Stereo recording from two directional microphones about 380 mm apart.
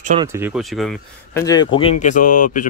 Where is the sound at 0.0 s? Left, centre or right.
Centre.